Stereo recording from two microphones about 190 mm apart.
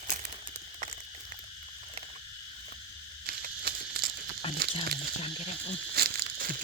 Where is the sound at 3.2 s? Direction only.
55° right (ahead or behind).